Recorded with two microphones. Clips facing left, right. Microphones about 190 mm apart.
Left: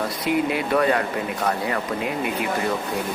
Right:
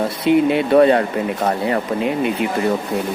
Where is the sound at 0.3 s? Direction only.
25° right (ahead or behind).